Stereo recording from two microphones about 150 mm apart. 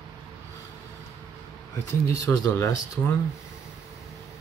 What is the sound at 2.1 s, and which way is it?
Speech, 20° left (ahead or behind).